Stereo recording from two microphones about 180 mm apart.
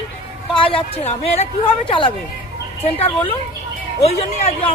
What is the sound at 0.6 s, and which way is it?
A woman's voice, 30° left (ahead or behind).